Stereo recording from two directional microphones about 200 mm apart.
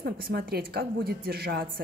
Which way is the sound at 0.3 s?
50° right (ahead or behind).